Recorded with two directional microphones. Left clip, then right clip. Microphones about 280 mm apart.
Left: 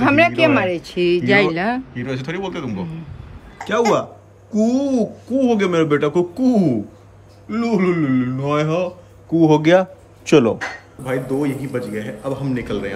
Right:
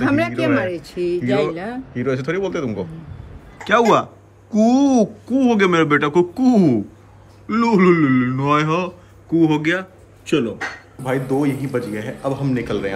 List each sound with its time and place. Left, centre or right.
0.0 s a sound: left
0.9 s speech: left
2.0 s speech: centre
11.1 s speech: centre